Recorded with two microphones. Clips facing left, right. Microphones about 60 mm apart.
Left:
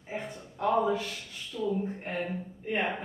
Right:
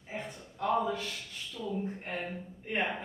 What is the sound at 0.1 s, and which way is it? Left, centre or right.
A woman's voice, centre.